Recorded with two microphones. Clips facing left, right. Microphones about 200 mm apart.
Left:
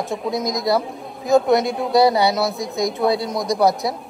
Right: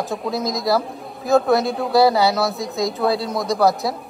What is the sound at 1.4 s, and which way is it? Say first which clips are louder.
Speech: left 1 dB; 20° left (ahead or behind).